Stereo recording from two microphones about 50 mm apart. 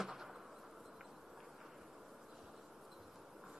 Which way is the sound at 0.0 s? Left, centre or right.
Centre.